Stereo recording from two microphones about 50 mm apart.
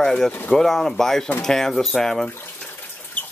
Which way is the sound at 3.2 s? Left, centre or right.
Left.